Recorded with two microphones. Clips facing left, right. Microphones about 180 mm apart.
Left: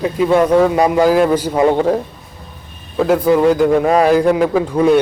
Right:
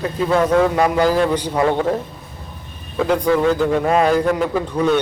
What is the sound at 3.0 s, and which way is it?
A man's voice, 5° left (ahead or behind).